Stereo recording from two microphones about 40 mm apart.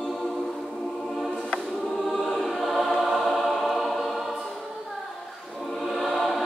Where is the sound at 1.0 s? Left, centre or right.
Centre.